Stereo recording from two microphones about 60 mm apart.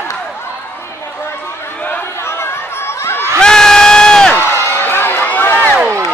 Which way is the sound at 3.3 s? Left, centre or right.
Centre.